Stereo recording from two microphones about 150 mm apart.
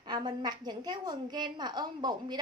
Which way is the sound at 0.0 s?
30° right (ahead or behind).